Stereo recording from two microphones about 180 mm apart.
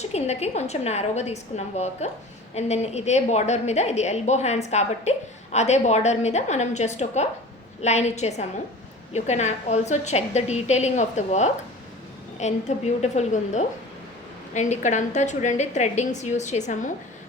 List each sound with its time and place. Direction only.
0.0 s a woman's voice: 35° left (ahead or behind)